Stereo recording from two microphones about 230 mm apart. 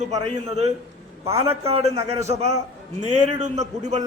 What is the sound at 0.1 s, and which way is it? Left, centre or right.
Speech, right.